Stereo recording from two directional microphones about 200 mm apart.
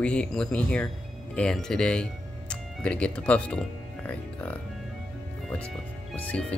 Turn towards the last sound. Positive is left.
turn(degrees=10)  # may be behind; listen again after turning